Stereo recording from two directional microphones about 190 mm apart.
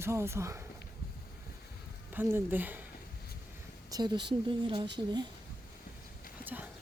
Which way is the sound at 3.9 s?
25° right (ahead or behind).